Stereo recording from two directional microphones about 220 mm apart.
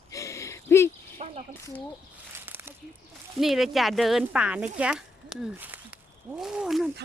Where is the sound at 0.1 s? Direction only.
15° left (ahead or behind).